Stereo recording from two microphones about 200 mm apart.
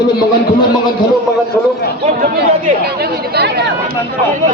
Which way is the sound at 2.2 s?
50° right (ahead or behind).